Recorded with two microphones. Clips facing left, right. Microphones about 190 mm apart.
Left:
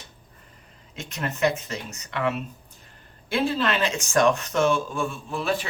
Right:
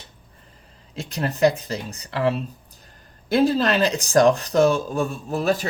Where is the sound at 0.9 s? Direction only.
35° right (ahead or behind).